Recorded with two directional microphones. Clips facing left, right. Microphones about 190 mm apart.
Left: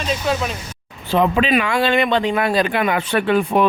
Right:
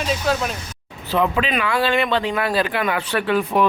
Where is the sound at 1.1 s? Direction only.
25° left (ahead or behind).